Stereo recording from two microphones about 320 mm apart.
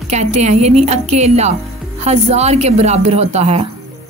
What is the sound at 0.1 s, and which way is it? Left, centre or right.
Speech, right.